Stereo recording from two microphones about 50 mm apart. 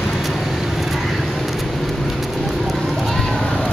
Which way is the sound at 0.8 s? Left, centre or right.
Centre.